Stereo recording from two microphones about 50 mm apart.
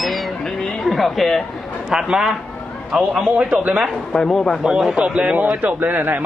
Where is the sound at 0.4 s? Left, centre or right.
Centre.